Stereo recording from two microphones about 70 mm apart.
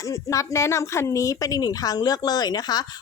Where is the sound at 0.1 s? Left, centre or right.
Left.